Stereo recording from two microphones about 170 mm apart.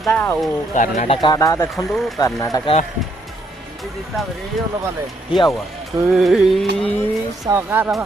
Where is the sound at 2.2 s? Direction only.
20° left (ahead or behind).